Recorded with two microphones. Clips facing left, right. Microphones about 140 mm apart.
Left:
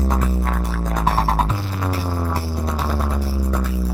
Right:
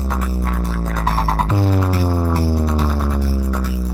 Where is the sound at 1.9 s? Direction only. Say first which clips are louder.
Right 5 dB; 10° right (ahead or behind).